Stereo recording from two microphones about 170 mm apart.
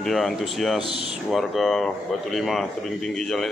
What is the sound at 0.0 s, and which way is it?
Speech, centre (ahead or behind).